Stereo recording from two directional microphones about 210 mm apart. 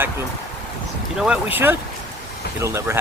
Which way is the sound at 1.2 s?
5° right (ahead or behind).